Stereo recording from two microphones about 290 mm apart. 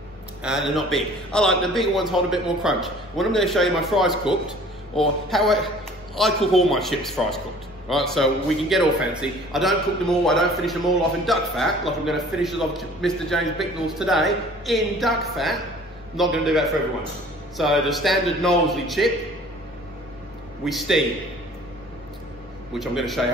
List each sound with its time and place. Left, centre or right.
0.4 s a man's voice: centre
20.6 s a man's voice: centre
22.8 s a man's voice: centre